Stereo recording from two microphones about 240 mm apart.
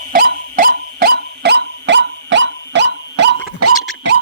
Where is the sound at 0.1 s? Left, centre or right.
Right.